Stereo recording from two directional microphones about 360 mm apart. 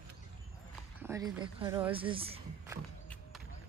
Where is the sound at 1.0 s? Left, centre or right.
Centre.